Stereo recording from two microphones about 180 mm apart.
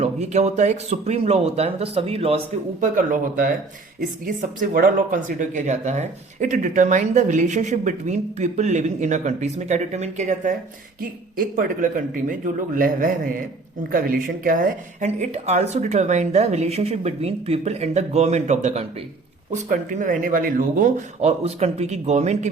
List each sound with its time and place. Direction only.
0.0 s speech: 40° right (ahead or behind)
2.8 s a man's voice: 45° right (ahead or behind)